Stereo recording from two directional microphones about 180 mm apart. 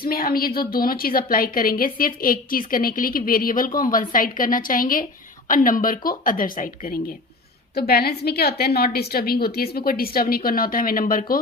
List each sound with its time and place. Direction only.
0.0 s a woman's voice: 55° left (ahead or behind)